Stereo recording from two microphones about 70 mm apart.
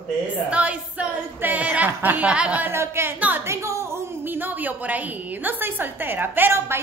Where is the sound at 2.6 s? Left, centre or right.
Right.